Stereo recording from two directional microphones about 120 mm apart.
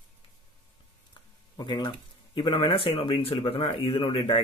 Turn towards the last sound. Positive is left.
turn(degrees=50)  # may be behind; listen again after turning